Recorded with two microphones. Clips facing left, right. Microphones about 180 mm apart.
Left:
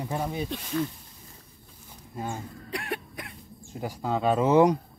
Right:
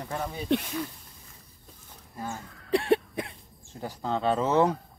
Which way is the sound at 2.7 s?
30° right (ahead or behind).